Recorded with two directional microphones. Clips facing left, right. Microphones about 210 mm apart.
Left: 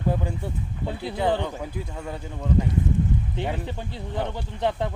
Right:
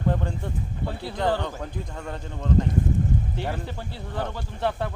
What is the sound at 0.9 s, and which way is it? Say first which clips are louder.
Speech: left 1 dB; 15° left (ahead or behind).